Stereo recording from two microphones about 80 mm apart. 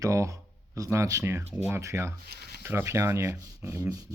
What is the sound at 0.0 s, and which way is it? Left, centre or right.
Speech, right.